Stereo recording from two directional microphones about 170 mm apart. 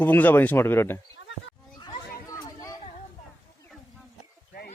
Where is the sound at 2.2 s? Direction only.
20° left (ahead or behind).